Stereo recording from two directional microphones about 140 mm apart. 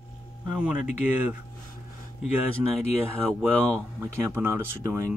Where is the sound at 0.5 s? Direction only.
10° right (ahead or behind).